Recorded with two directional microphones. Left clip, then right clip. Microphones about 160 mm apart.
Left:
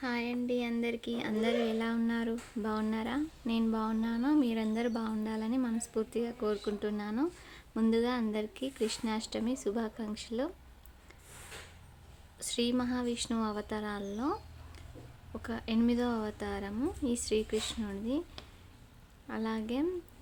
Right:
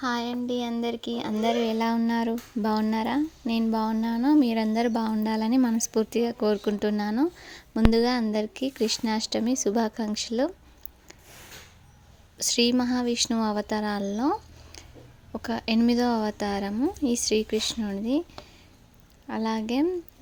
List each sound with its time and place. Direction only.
0.2 s speech: 25° right (ahead or behind)
1.8 s speech: 40° right (ahead or behind)
12.4 s a woman's voice: 45° right (ahead or behind)
19.3 s speech: 40° right (ahead or behind)